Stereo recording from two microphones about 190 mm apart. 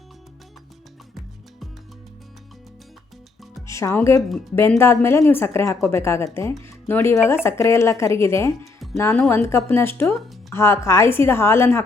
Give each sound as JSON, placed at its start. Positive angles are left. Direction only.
{"t": 3.7, "sound": "speech", "side_deg": 15}